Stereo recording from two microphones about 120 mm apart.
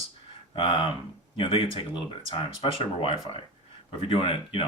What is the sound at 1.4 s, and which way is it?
Speech, 45° left (ahead or behind).